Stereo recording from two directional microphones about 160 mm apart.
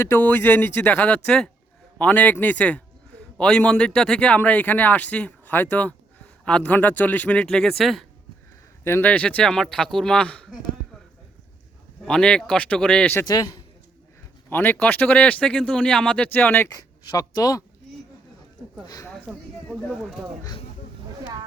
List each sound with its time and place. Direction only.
0.0 s speech: 10° left (ahead or behind)
8.8 s speech: 15° left (ahead or behind)
12.0 s speech: 5° left (ahead or behind)
13.2 s a man's voice: 25° left (ahead or behind)
14.5 s speech: 10° left (ahead or behind)
18.9 s speech: 20° left (ahead or behind)
19.3 s speech: 5° right (ahead or behind)